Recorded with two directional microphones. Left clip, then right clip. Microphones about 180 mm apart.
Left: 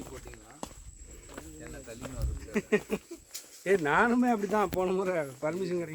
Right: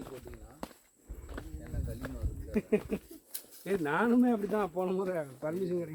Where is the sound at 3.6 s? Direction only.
35° left (ahead or behind).